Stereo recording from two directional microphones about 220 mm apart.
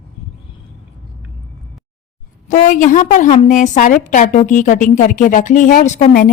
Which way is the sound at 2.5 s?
35° left (ahead or behind).